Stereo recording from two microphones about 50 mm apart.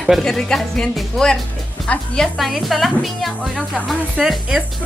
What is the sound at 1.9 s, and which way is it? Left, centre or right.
Speech, left.